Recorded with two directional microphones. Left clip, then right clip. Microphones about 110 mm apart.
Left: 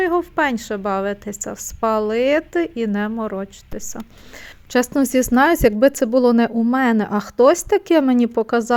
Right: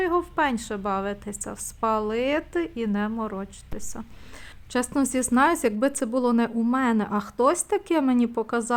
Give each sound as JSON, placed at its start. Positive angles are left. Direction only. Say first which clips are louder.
{"t": 0.0, "sound": "a woman's voice", "louder": "left 5 dB", "side_deg": 35}
{"t": 4.7, "sound": "speech", "louder": "left 8 dB", "side_deg": 50}